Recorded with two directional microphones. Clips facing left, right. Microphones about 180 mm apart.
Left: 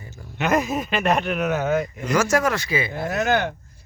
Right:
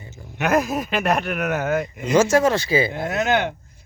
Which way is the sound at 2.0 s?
25° right (ahead or behind).